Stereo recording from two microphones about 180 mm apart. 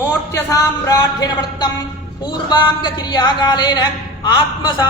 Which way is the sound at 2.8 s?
25° left (ahead or behind).